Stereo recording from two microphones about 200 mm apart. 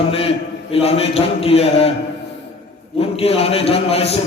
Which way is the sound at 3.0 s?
30° left (ahead or behind).